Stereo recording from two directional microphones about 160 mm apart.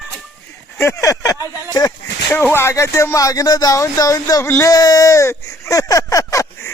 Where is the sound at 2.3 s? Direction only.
15° left (ahead or behind).